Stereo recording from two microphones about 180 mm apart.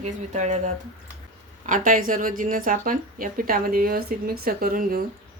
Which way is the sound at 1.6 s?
45° right (ahead or behind).